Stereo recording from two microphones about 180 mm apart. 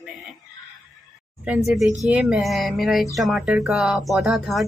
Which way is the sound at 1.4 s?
5° right (ahead or behind).